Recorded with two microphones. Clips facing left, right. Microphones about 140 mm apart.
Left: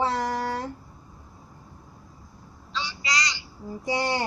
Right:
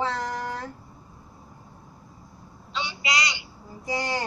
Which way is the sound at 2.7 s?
25° right (ahead or behind).